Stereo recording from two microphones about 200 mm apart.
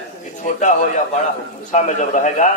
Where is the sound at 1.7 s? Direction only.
35° left (ahead or behind).